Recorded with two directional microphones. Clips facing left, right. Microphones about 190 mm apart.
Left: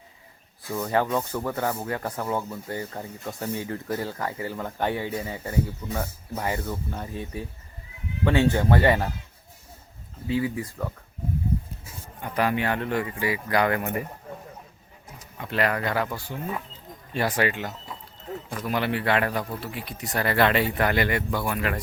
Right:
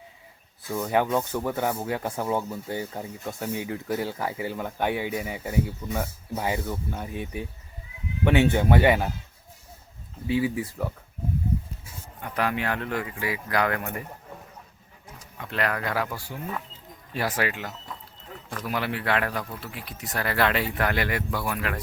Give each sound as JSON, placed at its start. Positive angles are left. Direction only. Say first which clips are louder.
{"t": 0.7, "sound": "speech", "louder": "right 1 dB", "side_deg": -10}
{"t": 8.7, "sound": "speech", "louder": "right 1 dB", "side_deg": -5}
{"t": 10.2, "sound": "speech", "louder": "right 1 dB", "side_deg": -20}
{"t": 10.6, "sound": "speech", "louder": "right 1 dB", "side_deg": -5}
{"t": 12.2, "sound": "speech", "louder": "left 3 dB", "side_deg": 0}
{"t": 15.4, "sound": "speech", "louder": "left 3 dB", "side_deg": 0}